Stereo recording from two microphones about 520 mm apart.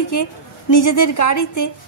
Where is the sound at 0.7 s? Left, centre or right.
Left.